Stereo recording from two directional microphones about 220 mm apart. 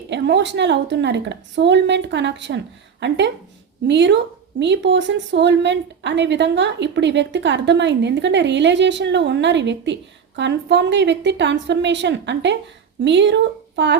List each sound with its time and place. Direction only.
0.1 s a woman's voice: 55° right (ahead or behind)